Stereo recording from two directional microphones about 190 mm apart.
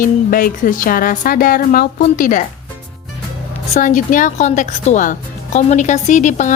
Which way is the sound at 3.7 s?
40° left (ahead or behind).